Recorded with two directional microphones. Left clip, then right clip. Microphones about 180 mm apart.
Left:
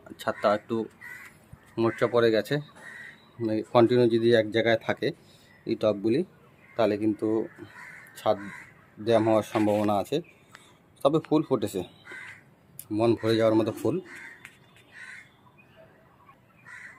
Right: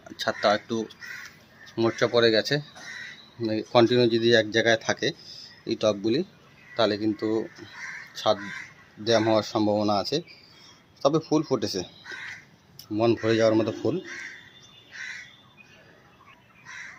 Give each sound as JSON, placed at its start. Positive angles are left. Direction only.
{"t": 0.2, "sound": "speech", "side_deg": 5}
{"t": 9.0, "sound": "speech", "side_deg": 5}
{"t": 12.9, "sound": "speech", "side_deg": 5}